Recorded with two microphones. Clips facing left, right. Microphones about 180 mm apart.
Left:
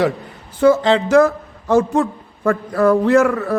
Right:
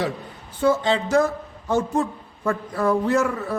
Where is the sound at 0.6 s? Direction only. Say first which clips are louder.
Left 7 dB; 90° left.